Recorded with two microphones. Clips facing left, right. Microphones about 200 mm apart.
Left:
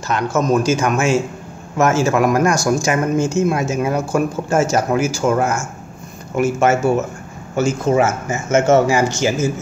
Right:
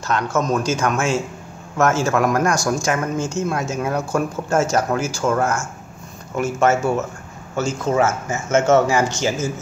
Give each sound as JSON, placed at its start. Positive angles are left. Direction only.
{"t": 0.1, "sound": "speech", "side_deg": 10}